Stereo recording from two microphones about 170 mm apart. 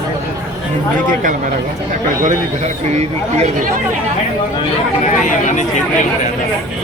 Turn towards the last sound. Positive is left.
turn(degrees=45)  # may be behind; listen again after turning